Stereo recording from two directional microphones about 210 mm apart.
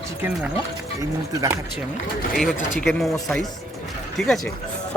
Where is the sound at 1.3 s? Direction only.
15° right (ahead or behind).